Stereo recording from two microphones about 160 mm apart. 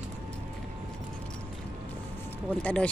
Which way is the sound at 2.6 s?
10° left (ahead or behind).